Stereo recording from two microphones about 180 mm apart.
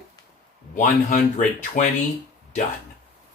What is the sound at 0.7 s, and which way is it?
Speech, 45° left (ahead or behind).